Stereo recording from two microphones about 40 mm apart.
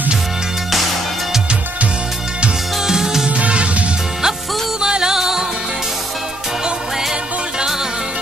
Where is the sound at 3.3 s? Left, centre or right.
Right.